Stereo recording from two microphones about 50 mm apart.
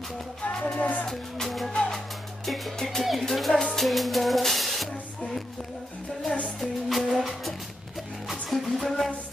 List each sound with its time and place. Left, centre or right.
0.5 s music: centre
0.7 s speech: left
1.0 s music: centre
6.6 s music: centre